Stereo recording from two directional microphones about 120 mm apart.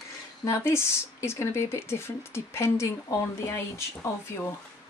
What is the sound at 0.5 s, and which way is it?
Speech, 20° left (ahead or behind).